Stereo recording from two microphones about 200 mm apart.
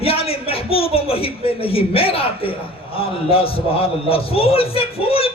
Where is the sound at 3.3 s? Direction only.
30° left (ahead or behind).